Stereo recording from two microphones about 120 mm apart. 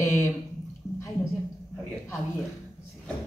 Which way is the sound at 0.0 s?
25° left (ahead or behind).